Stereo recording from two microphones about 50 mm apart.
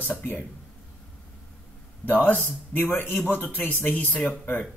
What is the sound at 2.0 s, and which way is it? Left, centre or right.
A man's voice, left.